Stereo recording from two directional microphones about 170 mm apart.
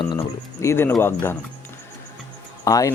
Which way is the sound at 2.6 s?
20° left (ahead or behind).